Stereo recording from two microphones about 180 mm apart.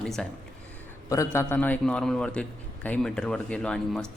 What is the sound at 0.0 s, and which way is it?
Speech, 5° left (ahead or behind).